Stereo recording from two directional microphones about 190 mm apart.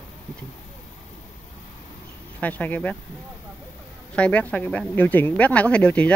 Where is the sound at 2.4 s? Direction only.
10° left (ahead or behind).